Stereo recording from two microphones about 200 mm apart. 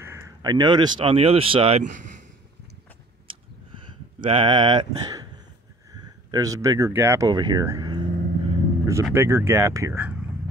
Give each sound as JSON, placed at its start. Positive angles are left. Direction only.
{"t": 0.0, "sound": "speech", "side_deg": -15}
{"t": 4.2, "sound": "speech", "side_deg": -25}